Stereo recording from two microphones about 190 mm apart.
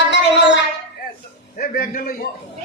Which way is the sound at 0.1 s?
65° left (ahead or behind).